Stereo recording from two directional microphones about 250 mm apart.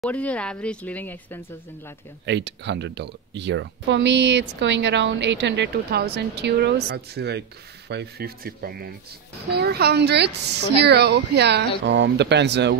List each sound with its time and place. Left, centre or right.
0.0 s speech: centre
2.2 s speech: right